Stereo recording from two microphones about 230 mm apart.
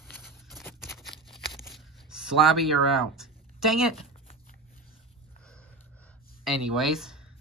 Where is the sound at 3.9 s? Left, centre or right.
Left.